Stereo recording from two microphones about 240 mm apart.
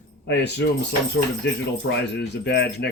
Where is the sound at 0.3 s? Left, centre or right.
Left.